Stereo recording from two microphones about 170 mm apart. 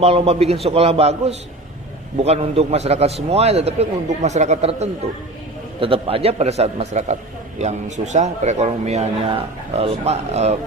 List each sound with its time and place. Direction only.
0.0 s a man's voice: 35° right (ahead or behind)